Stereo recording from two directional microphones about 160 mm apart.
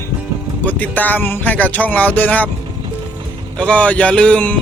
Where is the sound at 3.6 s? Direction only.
10° left (ahead or behind).